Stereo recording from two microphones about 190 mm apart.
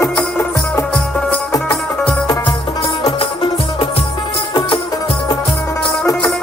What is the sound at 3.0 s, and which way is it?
Music, 30° left (ahead or behind).